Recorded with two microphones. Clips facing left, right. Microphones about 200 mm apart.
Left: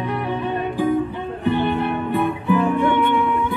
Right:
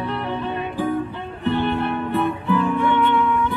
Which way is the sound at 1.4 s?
15° left (ahead or behind).